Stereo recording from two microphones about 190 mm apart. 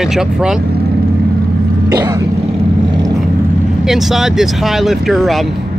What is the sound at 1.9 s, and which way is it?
Throat clearing, 20° right (ahead or behind).